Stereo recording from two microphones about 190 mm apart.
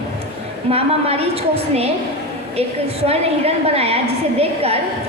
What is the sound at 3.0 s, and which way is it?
A woman's voice, 30° right (ahead or behind).